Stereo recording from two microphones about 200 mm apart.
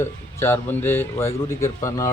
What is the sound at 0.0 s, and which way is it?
A man's voice, 10° left (ahead or behind).